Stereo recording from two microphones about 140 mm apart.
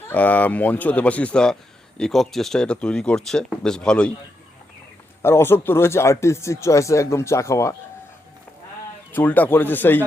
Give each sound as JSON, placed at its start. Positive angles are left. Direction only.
{"t": 0.1, "sound": "speech", "side_deg": 10}
{"t": 5.2, "sound": "speech", "side_deg": 15}
{"t": 9.1, "sound": "speech", "side_deg": 15}